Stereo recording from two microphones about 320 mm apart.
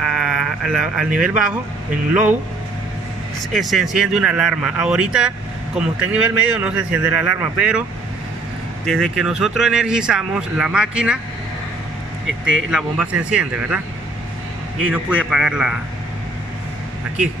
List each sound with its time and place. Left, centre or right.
0.0 s sheep: centre
3.5 s speech: centre
8.8 s speech: centre
12.7 s speech: centre
14.8 s speech: centre